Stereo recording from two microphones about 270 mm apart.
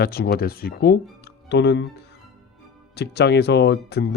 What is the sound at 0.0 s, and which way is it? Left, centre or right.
Speech, left.